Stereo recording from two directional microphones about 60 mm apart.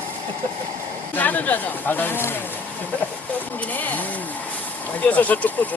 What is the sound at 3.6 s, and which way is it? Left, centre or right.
Speech, left.